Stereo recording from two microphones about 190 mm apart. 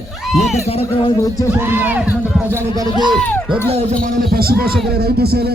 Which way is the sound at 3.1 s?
10° left (ahead or behind).